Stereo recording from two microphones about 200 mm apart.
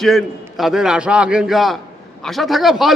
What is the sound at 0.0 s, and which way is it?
A man's voice, centre (ahead or behind).